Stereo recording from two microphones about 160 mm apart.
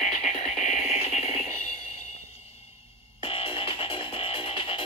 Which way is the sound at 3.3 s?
35° left (ahead or behind).